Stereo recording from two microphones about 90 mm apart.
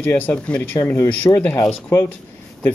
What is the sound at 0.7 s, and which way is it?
Speech, 30° left (ahead or behind).